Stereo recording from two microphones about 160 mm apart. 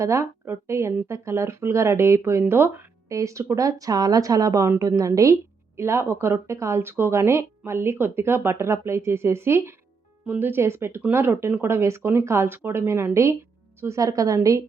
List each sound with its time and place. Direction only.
0.0 s a woman's voice: 20° right (ahead or behind)